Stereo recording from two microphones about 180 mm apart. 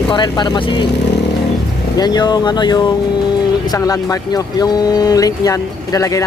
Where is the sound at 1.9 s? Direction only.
20° left (ahead or behind).